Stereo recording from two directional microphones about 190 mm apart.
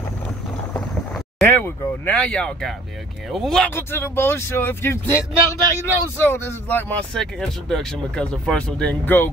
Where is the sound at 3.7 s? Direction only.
10° left (ahead or behind).